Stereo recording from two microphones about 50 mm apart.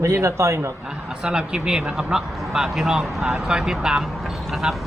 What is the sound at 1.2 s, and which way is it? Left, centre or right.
Speech, centre.